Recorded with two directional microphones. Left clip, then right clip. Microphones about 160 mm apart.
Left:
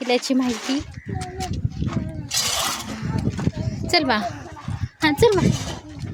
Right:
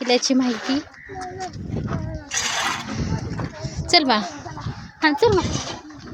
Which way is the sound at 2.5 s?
60° left (ahead or behind).